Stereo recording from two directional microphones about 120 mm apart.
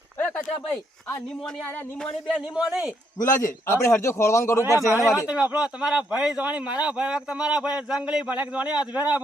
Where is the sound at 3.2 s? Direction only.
90° left.